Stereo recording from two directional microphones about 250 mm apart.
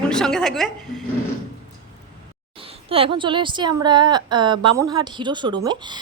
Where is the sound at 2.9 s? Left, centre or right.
Right.